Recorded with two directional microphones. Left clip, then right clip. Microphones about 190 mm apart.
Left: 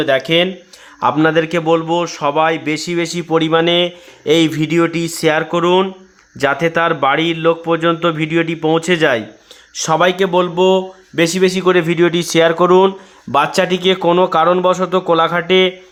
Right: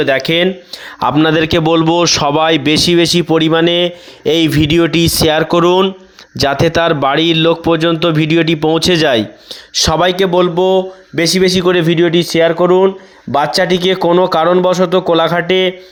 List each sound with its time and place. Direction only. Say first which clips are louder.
0.0 s speech: right 2 dB; 40° right (ahead or behind)
1.6 s speech: right 3 dB; 55° right (ahead or behind)
2.0 s speech: right 8 dB; 35° right (ahead or behind)
2.2 s speech: right 3 dB; 50° right (ahead or behind); by 5.5 s 30° right (ahead or behind)
5.5 s speech: right 4 dB; 45° right (ahead or behind)
6.3 s speech: right 3 dB; 30° right (ahead or behind)
8.9 s speech: right 3 dB; 30° right (ahead or behind); by 12.9 s centre (ahead or behind)
13.3 s speech: right 2 dB; 15° right (ahead or behind)